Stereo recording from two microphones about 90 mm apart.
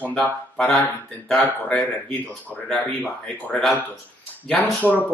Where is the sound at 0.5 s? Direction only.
5° left (ahead or behind).